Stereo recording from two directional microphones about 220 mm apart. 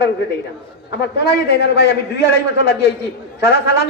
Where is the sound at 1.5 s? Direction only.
50° left (ahead or behind).